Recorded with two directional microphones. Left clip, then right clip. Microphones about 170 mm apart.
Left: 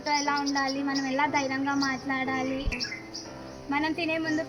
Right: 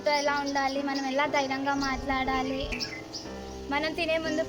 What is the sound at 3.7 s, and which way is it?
Speech, 25° right (ahead or behind).